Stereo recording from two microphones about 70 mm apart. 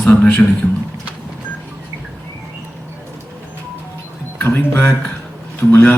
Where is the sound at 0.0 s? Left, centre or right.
Left.